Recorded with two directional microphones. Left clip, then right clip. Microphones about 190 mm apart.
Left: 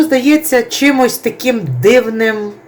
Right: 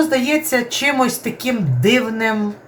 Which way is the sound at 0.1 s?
35° left (ahead or behind).